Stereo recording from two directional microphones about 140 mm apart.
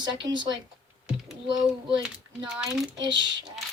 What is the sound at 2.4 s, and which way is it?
Speech, 5° right (ahead or behind).